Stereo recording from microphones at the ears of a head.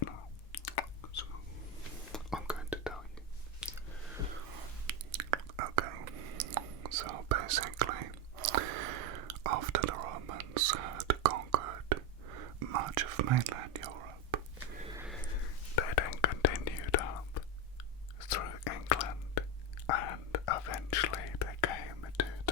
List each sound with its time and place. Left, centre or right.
0.0 s whispering: left
2.1 s whispering: centre
4.4 s whispering: right
15.4 s whispering: left